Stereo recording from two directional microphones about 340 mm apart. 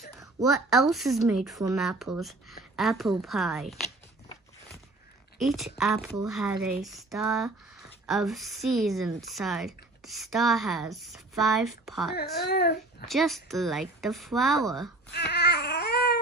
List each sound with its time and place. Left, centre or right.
0.2 s speech: centre
5.4 s speech: centre
12.4 s speech: left
13.0 s speech: centre
15.1 s a sound: left